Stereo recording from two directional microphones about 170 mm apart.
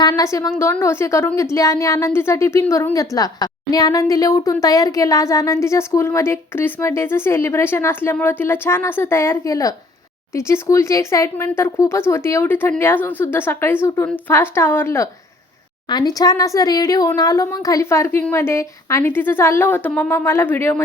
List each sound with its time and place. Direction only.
0.0 s a woman's voice: 20° left (ahead or behind)